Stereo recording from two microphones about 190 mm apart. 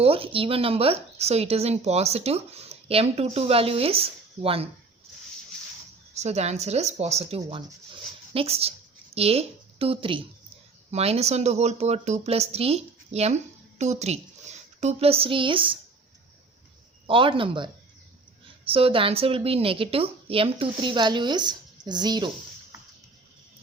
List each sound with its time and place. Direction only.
0.0 s a woman's voice: 30° right (ahead or behind)
6.1 s a woman's voice: 35° right (ahead or behind)
17.1 s a woman's voice: 25° right (ahead or behind)